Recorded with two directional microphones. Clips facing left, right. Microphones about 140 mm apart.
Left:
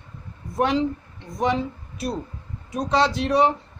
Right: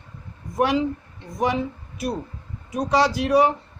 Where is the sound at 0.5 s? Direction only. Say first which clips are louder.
Right 1 dB; 10° right (ahead or behind).